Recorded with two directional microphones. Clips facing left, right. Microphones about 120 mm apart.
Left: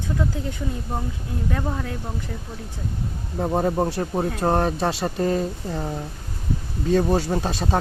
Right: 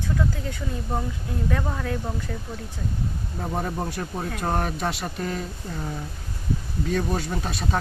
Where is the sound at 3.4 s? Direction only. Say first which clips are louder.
Left 7 dB; 25° left (ahead or behind).